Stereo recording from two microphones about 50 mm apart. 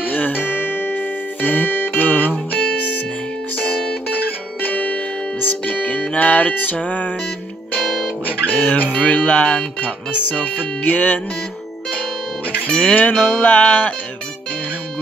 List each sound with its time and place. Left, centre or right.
0.0 s music: left
4.6 s music: left
8.5 s speech: left
8.9 s music: left
9.8 s music: left
12.6 s music: left